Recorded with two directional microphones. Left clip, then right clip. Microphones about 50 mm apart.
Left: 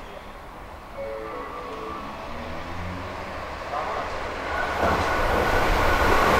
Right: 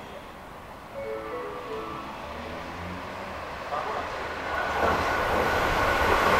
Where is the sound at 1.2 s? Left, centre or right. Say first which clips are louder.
Left 1 dB; centre.